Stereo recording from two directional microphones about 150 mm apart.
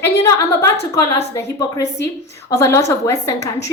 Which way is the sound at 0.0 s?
20° left (ahead or behind).